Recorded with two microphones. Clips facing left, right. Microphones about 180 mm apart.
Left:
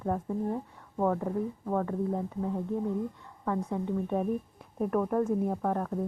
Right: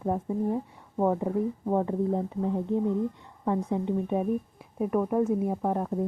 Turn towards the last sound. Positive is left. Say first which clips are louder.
# right 2 dB
turn(degrees=-15)  # may be behind; listen again after turning